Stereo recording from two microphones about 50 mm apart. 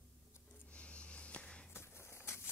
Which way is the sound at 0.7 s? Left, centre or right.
Left.